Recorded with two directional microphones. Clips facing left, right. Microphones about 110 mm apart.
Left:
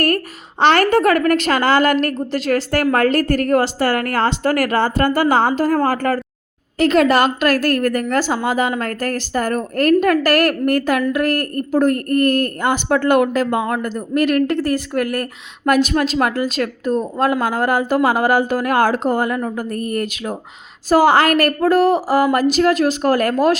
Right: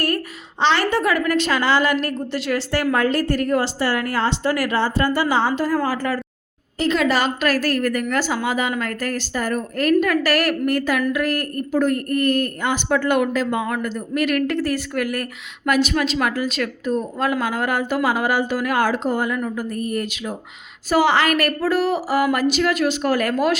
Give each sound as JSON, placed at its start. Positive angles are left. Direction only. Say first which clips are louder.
{"t": 0.6, "sound": "a woman's voice", "louder": "left 5 dB", "side_deg": 55}
{"t": 13.8, "sound": "a woman's voice", "louder": "left 4 dB", "side_deg": 40}